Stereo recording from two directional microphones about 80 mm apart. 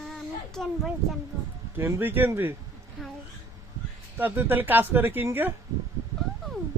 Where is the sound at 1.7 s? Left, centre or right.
Right.